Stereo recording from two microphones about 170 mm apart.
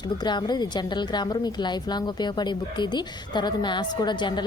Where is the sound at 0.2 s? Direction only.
25° left (ahead or behind).